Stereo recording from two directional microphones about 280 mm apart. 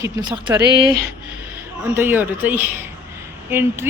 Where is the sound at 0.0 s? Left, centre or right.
Centre.